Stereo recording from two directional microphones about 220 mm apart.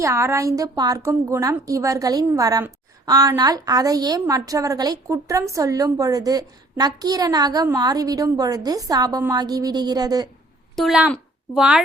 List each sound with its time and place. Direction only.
0.0 s a woman's voice: 15° right (ahead or behind)
10.8 s a child's voice: 5° right (ahead or behind)